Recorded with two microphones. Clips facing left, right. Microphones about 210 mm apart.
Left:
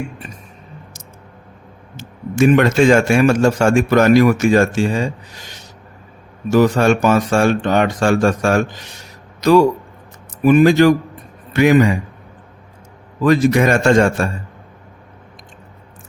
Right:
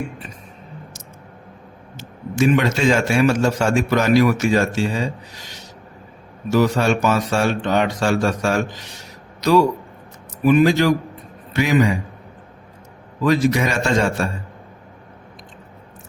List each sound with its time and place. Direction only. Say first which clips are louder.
2.0 s a man's voice: left 4 dB; 55° left (ahead or behind)
6.5 s a man's voice: left 4 dB; 50° left (ahead or behind)
13.2 s a man's voice: left 4 dB; 50° left (ahead or behind)